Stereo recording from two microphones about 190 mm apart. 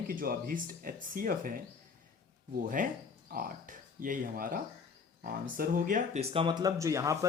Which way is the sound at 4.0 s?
45° right (ahead or behind).